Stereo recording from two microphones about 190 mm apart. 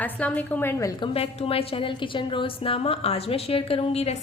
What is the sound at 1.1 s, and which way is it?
A woman's voice, 30° left (ahead or behind).